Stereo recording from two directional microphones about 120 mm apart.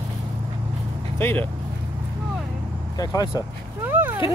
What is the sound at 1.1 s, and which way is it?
Vehicle, 15° left (ahead or behind).